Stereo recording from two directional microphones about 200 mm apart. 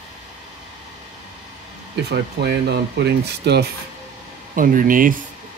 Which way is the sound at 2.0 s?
55° right (ahead or behind).